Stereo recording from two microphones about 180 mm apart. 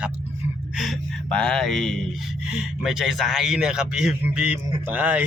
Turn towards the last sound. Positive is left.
turn(degrees=-10)  # may be behind; listen again after turning